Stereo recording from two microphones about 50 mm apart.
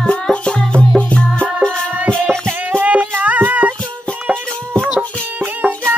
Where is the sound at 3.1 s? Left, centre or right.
Right.